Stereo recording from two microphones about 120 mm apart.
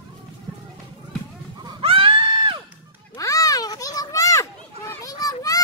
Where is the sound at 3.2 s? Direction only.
30° left (ahead or behind).